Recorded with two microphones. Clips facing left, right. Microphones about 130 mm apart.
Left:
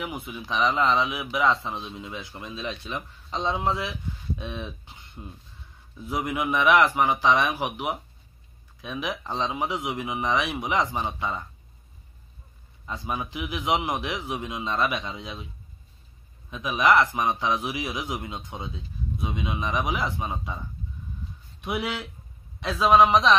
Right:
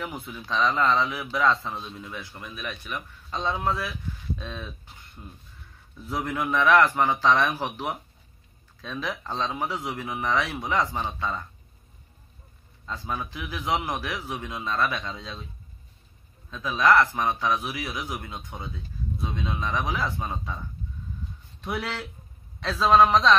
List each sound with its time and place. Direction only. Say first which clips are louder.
0.0 s a man's voice: left 1 dB; 10° left (ahead or behind)
12.8 s a man's voice: left 1 dB; 15° left (ahead or behind)
16.4 s a man's voice: even; 15° left (ahead or behind)
21.5 s a man's voice: left 2 dB; 15° left (ahead or behind)